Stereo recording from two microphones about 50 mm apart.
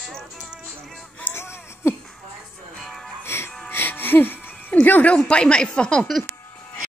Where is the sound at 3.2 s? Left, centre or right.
Left.